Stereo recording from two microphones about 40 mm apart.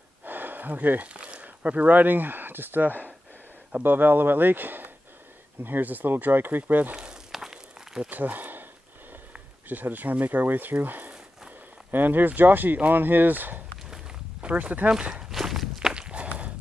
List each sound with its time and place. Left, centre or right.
0.2 s a sound: right
1.0 s speech: right
7.0 s walk: centre
8.1 s speech: right
9.7 s speech: right
14.4 s speech: right
15.2 s walk: centre
15.8 s walk: right